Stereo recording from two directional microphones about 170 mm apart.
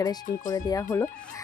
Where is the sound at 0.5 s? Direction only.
20° left (ahead or behind).